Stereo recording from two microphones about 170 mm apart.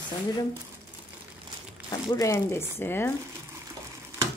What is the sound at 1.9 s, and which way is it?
A woman's voice, 20° left (ahead or behind).